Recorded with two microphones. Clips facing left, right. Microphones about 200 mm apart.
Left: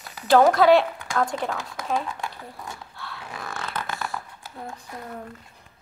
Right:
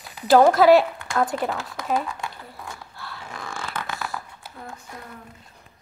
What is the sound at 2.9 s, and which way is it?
Zipper, centre (ahead or behind).